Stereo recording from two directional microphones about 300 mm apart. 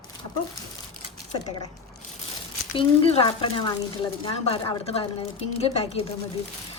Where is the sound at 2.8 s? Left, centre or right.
Centre.